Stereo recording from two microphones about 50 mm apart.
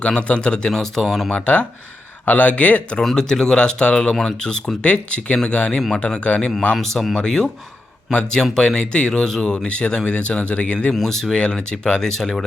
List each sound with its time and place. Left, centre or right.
0.0 s speech: left
0.7 s speech: centre
1.3 s speech: left
3.0 s speech: centre
4.1 s speech: centre; by 6.5 s left
6.7 s speech: centre; by 10.8 s left
10.9 s speech: centre